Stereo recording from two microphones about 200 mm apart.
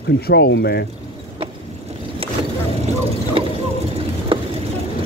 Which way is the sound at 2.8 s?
30° right (ahead or behind).